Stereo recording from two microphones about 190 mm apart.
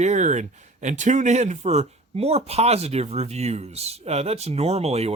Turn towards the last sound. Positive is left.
turn(degrees=-35)  # may be behind; listen again after turning